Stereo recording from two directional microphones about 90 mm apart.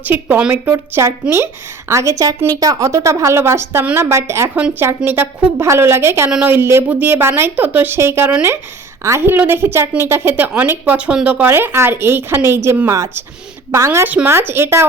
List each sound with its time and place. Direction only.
0.0 s speech: 20° right (ahead or behind)
0.7 s speech: 30° right (ahead or behind)